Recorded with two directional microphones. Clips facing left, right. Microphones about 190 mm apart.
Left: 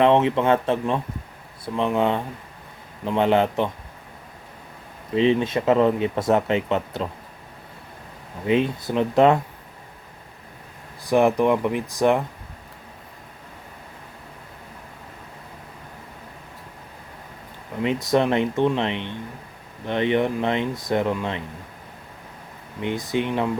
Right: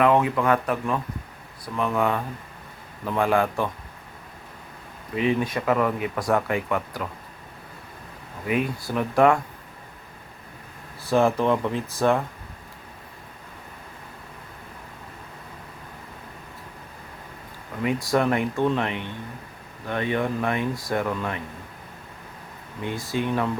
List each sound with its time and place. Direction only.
0.0 s speech: 25° left (ahead or behind)
5.1 s speech: 25° left (ahead or behind)
8.4 s speech: 25° left (ahead or behind)
11.0 s speech: 15° left (ahead or behind)
17.8 s speech: 20° left (ahead or behind)
22.8 s speech: 20° left (ahead or behind)